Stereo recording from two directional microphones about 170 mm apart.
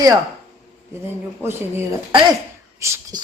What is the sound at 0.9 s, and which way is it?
Speech, 15° right (ahead or behind).